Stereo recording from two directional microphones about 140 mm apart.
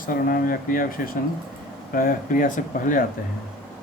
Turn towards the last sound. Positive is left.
turn(degrees=70)  # may be behind; listen again after turning